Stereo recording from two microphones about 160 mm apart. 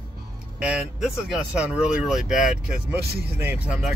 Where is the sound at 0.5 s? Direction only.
5° right (ahead or behind).